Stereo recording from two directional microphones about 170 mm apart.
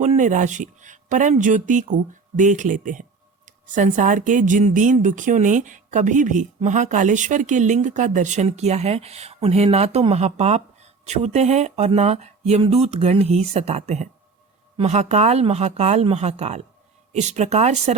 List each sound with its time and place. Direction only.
0.0 s speech: 45° right (ahead or behind)